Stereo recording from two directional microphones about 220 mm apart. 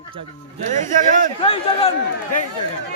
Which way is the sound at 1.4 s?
25° left (ahead or behind).